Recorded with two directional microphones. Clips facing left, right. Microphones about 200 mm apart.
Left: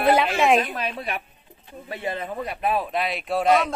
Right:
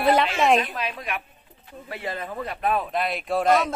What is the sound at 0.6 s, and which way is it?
Speech, 40° left (ahead or behind).